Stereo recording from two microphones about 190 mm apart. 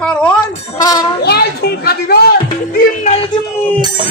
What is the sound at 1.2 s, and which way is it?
A woman's voice, 60° left (ahead or behind).